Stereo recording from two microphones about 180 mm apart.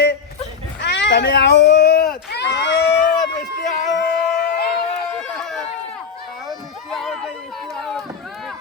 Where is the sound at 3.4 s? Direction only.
45° left (ahead or behind).